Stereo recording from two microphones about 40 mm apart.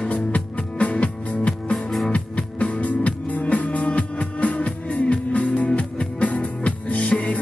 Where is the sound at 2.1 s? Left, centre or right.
Left.